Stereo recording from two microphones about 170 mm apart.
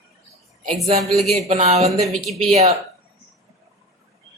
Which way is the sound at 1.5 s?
40° right (ahead or behind).